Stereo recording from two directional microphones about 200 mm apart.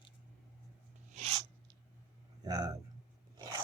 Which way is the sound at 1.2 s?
30° right (ahead or behind).